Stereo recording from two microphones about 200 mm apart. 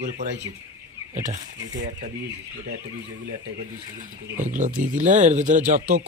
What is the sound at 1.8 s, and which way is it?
Speech, 40° right (ahead or behind).